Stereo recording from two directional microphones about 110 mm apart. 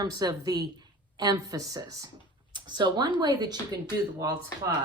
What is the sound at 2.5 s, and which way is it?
Speech, 45° right (ahead or behind).